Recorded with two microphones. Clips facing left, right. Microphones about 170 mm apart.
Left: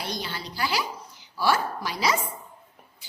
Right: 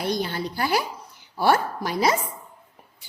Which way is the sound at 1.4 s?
55° right (ahead or behind).